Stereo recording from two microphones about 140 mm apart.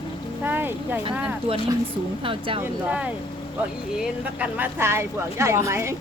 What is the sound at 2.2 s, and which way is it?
Speech, 40° right (ahead or behind).